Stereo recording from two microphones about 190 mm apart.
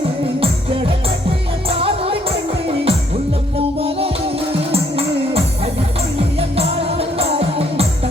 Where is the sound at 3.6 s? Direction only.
30° right (ahead or behind).